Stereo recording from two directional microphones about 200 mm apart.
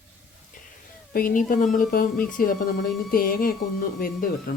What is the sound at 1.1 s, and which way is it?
Speech, 45° left (ahead or behind).